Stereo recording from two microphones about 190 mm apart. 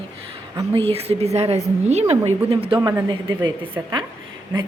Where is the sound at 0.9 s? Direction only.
30° right (ahead or behind).